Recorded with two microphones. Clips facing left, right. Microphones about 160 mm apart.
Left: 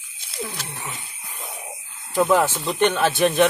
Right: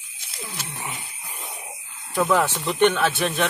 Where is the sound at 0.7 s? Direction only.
10° right (ahead or behind).